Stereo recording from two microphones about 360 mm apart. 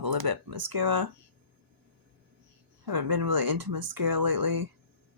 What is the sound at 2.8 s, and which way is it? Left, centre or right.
Speech, right.